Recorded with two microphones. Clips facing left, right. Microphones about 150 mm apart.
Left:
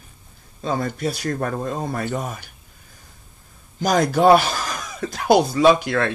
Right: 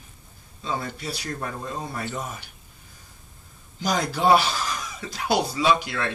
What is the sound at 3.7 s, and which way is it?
Speech, 50° left (ahead or behind).